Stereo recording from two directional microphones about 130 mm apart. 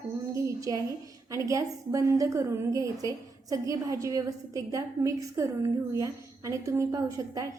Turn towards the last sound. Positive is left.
turn(degrees=-25)  # may be behind; listen again after turning